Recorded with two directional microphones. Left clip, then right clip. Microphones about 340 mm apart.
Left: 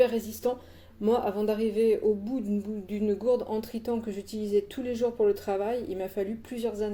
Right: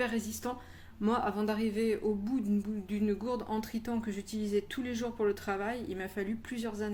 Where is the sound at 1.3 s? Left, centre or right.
Right.